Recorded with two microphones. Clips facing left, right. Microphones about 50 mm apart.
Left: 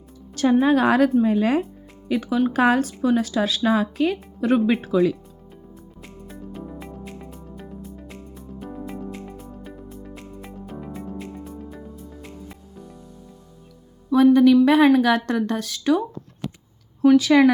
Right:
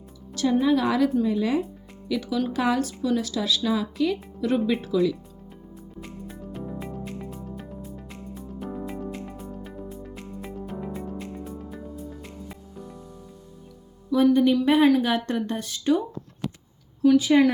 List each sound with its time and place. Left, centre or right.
0.6 s speech: left
2.0 s speech: left
6.0 s music: centre
14.1 s a woman's voice: left
17.2 s a woman's voice: left